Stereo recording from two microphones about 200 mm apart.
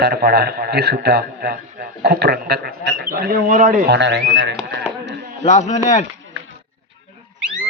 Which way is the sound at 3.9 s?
60° right (ahead or behind).